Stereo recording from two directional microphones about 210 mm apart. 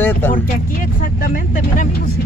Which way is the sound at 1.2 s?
40° left (ahead or behind).